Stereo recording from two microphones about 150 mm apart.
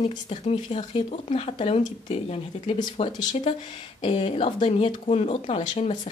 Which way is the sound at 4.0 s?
35° left (ahead or behind).